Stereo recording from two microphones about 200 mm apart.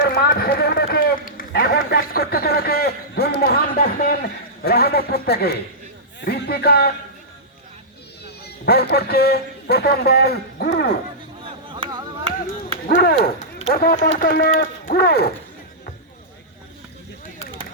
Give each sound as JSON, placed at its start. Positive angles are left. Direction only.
{"t": 0.0, "sound": "run", "side_deg": 50}
{"t": 6.1, "sound": "a man's voice", "side_deg": 55}
{"t": 8.6, "sound": "a man's voice", "side_deg": 55}
{"t": 11.4, "sound": "a sound", "side_deg": -25}
{"t": 12.9, "sound": "a man's voice", "side_deg": 50}